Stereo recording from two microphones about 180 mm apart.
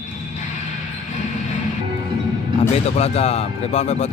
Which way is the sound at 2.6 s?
35° left (ahead or behind).